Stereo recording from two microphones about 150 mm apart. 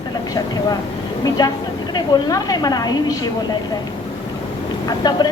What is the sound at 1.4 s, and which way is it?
Speech, 25° left (ahead or behind).